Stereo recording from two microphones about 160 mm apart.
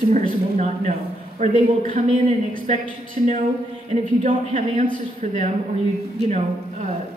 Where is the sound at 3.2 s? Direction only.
45° right (ahead or behind).